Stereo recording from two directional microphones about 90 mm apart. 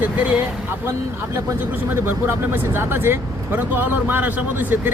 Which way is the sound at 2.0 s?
25° right (ahead or behind).